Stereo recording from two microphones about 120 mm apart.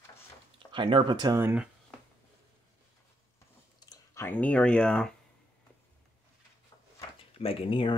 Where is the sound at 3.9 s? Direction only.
25° left (ahead or behind).